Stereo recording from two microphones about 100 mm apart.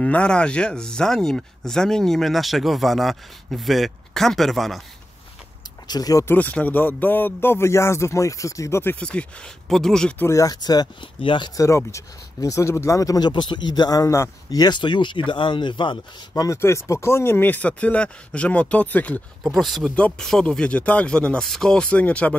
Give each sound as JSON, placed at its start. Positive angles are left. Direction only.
{"t": 0.0, "sound": "speech", "side_deg": 10}
{"t": 5.9, "sound": "speech", "side_deg": 40}
{"t": 6.2, "sound": "speech", "side_deg": 15}
{"t": 9.0, "sound": "speech", "side_deg": 10}
{"t": 10.1, "sound": "speech", "side_deg": 25}
{"t": 10.4, "sound": "speech", "side_deg": 40}
{"t": 11.1, "sound": "speech", "side_deg": 55}
{"t": 11.5, "sound": "speech", "side_deg": 30}
{"t": 13.3, "sound": "speech", "side_deg": 55}
{"t": 16.3, "sound": "speech", "side_deg": 30}
{"t": 19.4, "sound": "speech", "side_deg": 0}